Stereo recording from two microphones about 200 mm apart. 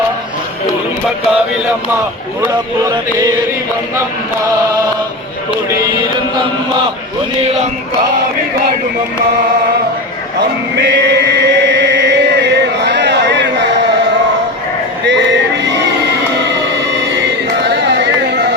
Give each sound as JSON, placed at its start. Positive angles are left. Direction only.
{"t": 7.4, "sound": "chant", "side_deg": -35}
{"t": 10.8, "sound": "chant", "side_deg": -60}
{"t": 15.0, "sound": "a sound", "side_deg": -60}